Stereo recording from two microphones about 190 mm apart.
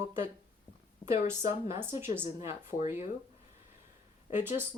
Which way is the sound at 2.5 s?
40° left (ahead or behind).